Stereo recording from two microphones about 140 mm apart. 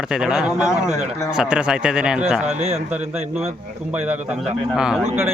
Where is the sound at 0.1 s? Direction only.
5° right (ahead or behind).